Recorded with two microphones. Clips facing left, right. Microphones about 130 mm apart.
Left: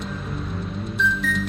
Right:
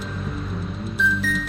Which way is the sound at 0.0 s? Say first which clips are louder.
Even; centre (ahead or behind).